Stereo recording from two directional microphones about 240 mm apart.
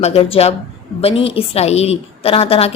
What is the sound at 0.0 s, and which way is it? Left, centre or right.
A woman's voice, left.